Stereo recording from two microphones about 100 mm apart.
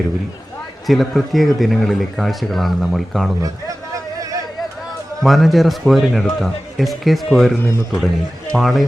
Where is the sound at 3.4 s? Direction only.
35° right (ahead or behind).